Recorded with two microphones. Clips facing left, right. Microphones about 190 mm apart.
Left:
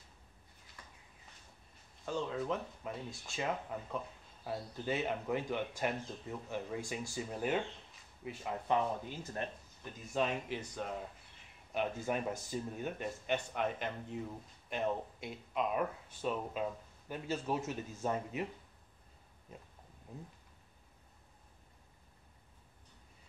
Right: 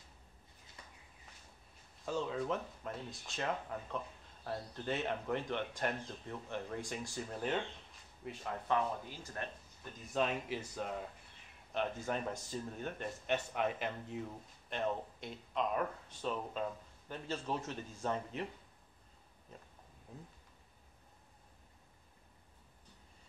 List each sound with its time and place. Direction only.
0.8 s a sound: 20° right (ahead or behind)
2.0 s speech: centre (ahead or behind)
8.6 s speech: 20° left (ahead or behind)
10.1 s speech: centre (ahead or behind)
11.7 s speech: 10° left (ahead or behind)